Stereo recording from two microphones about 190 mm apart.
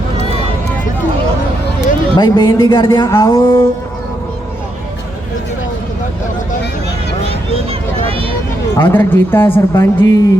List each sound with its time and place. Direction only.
2.1 s a woman's voice: 25° left (ahead or behind)
7.3 s a sound: 30° right (ahead or behind)
8.7 s a woman's voice: 10° left (ahead or behind)